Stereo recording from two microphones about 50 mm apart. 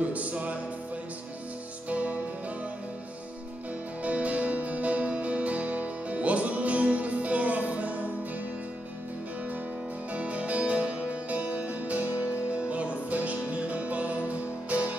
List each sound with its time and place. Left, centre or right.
0.0 s music: right
1.9 s music: right
4.0 s music: right
10.1 s music: right